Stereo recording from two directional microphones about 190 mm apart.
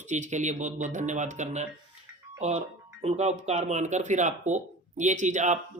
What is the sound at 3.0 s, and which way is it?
Speech, 35° right (ahead or behind).